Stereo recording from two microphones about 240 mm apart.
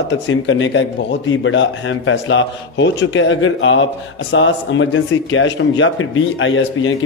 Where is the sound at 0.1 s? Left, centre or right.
Left.